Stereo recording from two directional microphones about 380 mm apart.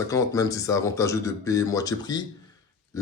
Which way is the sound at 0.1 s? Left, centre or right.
Centre.